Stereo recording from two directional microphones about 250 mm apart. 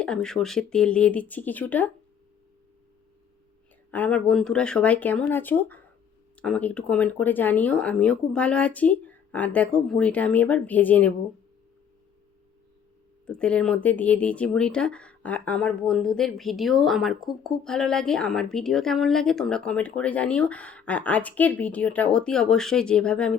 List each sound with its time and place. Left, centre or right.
0.0 s speech: centre
3.9 s speech: centre
13.2 s speech: centre